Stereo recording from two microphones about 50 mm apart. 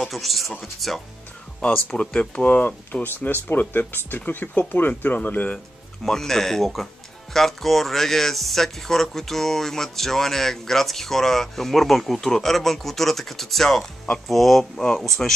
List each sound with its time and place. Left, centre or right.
0.0 s speech: centre
1.6 s speech: centre
2.6 s speech: left
6.0 s speech: centre